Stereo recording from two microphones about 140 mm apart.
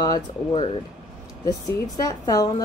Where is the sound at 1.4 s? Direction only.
25° left (ahead or behind).